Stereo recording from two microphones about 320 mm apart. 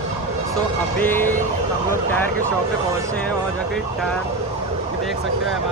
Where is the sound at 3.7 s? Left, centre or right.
Centre.